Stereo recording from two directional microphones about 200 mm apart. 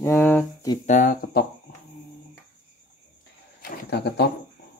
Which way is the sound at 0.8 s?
45° left (ahead or behind).